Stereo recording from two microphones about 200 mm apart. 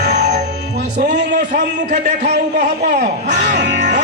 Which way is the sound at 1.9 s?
40° right (ahead or behind).